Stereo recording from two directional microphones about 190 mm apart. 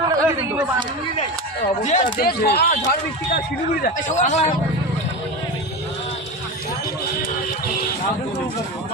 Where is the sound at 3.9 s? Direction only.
40° left (ahead or behind).